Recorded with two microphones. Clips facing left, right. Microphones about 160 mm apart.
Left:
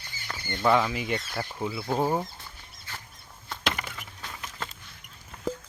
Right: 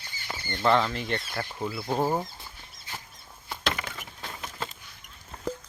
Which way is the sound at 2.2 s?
15° right (ahead or behind).